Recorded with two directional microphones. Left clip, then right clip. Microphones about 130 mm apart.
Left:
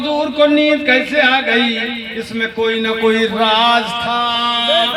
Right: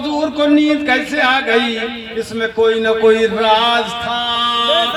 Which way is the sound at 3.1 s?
30° left (ahead or behind).